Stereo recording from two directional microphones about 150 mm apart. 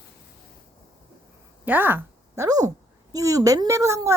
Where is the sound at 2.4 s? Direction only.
25° right (ahead or behind).